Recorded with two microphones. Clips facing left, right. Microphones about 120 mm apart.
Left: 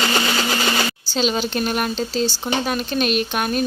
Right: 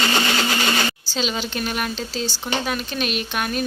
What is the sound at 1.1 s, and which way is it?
Speech, 45° left (ahead or behind).